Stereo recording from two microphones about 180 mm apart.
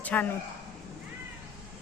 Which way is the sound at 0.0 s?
10° left (ahead or behind).